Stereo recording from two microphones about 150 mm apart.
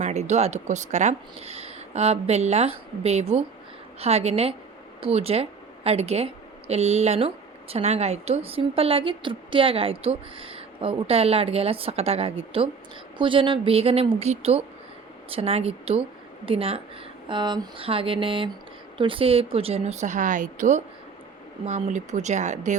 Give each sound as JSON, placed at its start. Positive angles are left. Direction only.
{"t": 0.0, "sound": "a woman's voice", "side_deg": -50}